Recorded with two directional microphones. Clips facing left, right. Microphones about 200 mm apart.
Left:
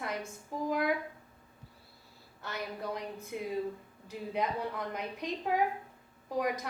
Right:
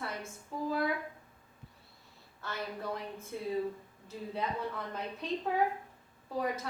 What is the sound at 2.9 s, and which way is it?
A woman's voice, 15° left (ahead or behind).